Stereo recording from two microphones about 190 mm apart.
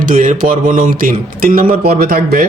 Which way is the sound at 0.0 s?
45° right (ahead or behind).